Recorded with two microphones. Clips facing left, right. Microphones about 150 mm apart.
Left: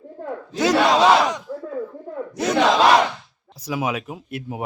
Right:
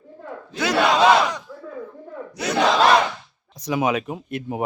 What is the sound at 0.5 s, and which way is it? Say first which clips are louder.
Battle cry: left 2 dB; 40° left (ahead or behind).